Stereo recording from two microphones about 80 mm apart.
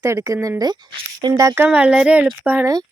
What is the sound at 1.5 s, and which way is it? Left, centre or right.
Speech, centre.